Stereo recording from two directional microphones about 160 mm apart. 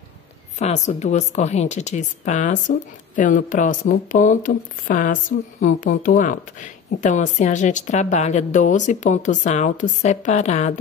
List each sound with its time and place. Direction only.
0.6 s a woman's voice: 45° left (ahead or behind)